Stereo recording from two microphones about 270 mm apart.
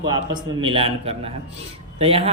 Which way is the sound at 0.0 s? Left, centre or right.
Centre.